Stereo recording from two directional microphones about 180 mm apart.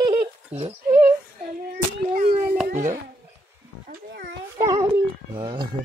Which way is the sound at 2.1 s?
45° right (ahead or behind).